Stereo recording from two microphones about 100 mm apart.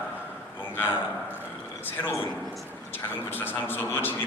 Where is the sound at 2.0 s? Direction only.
25° left (ahead or behind).